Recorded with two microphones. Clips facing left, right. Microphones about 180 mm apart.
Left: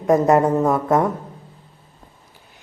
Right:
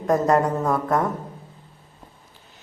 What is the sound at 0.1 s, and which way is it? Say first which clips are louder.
Speech: left 4 dB; 20° left (ahead or behind).